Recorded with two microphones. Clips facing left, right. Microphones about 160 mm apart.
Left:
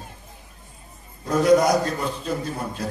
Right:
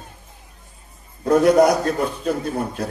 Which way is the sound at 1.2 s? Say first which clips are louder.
Right 4 dB; 60° right (ahead or behind).